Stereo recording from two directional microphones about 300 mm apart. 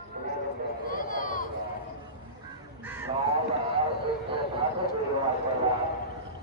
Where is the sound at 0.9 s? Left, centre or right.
Left.